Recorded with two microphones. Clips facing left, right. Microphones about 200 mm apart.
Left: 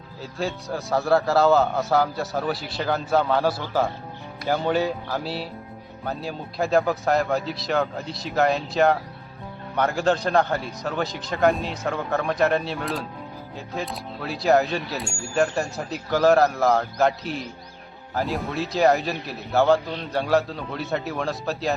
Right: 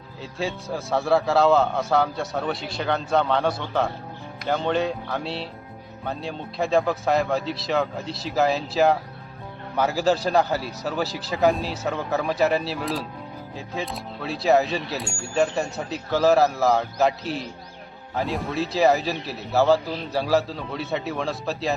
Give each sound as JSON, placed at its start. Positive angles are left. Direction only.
{"t": 0.2, "sound": "speech", "side_deg": 0}